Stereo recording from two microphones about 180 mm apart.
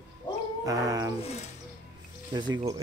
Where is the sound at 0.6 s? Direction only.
20° right (ahead or behind).